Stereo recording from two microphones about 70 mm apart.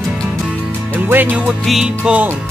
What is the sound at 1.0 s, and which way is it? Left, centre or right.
Music, right.